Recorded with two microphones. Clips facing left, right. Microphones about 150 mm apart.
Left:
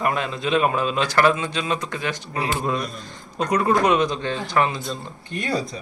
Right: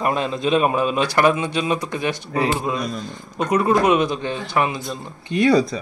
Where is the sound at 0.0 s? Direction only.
25° right (ahead or behind).